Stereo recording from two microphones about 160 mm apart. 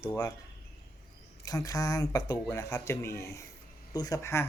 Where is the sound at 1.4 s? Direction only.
20° left (ahead or behind).